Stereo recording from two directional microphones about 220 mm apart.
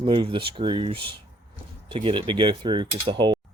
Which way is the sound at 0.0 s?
25° right (ahead or behind).